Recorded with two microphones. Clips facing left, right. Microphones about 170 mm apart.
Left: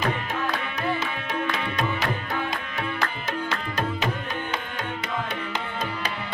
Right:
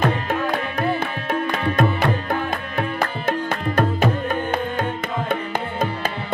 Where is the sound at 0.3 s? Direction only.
55° right (ahead or behind).